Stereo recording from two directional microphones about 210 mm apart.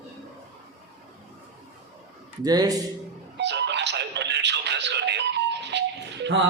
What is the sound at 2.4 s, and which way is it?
Speech, 20° right (ahead or behind).